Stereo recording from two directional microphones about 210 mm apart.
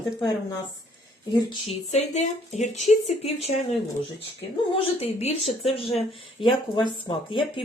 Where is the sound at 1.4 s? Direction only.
25° left (ahead or behind).